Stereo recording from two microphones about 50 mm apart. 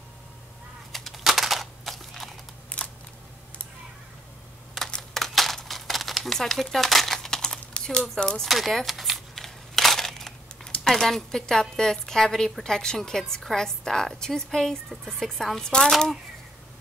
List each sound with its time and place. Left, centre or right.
0.9 s typing: centre
2.7 s camera: left
5.1 s crumpling: centre
8.1 s a woman's voice: centre
8.5 s speech: centre
9.3 s a sound: centre
11.7 s a woman's voice: centre